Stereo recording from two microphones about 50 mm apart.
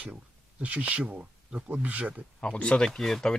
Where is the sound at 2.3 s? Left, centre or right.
Left.